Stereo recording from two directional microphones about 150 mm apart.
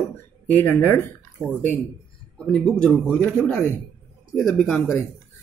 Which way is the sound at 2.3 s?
5° left (ahead or behind).